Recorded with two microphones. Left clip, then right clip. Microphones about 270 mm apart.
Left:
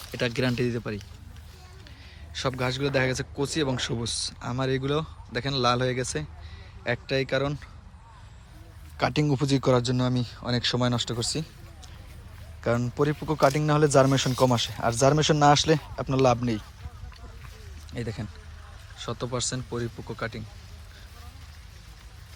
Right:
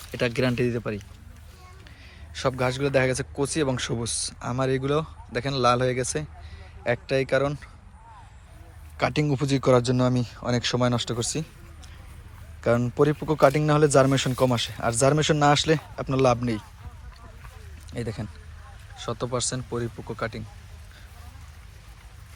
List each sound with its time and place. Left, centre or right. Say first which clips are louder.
0.1 s speech: right 2 dB; centre
2.3 s speech: right 3 dB; centre
9.0 s speech: right 1 dB; centre
12.6 s speech: right 4 dB; centre
17.9 s speech: right 2 dB; centre